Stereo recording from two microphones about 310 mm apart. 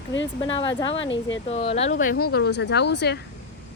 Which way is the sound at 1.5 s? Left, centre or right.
Centre.